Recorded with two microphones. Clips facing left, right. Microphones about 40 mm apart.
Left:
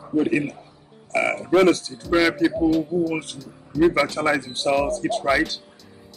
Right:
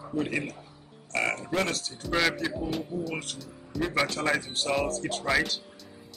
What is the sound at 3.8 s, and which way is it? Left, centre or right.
Speech, centre.